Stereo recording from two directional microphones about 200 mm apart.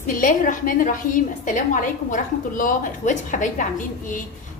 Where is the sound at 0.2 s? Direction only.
45° left (ahead or behind).